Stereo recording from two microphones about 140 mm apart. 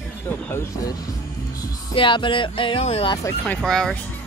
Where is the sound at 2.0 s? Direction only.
35° left (ahead or behind).